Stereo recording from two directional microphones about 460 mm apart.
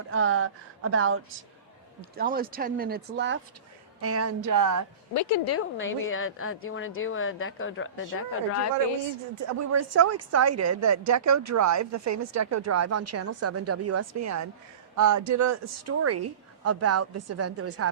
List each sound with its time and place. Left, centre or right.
0.1 s speech: right
5.1 s a woman's voice: left
9.3 s speech: right